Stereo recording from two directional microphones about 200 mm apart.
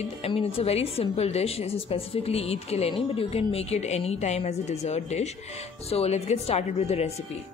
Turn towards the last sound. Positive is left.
turn(degrees=30)  # may be behind; listen again after turning